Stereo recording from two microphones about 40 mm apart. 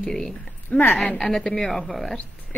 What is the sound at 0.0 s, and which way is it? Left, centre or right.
Speech, centre.